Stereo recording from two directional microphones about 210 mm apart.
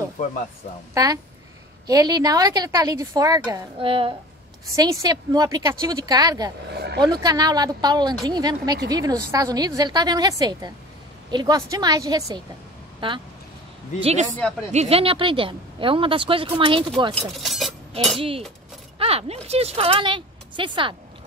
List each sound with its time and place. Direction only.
0.2 s speech: 35° left (ahead or behind)
0.9 s speech: 15° right (ahead or behind)
6.7 s vehicle: 50° right (ahead or behind)
7.0 s speech: 20° right (ahead or behind)
14.7 s speech: 30° right (ahead or behind)
17.1 s speech: centre (ahead or behind)
18.9 s a sound: 30° right (ahead or behind)
19.4 s speech: 30° right (ahead or behind)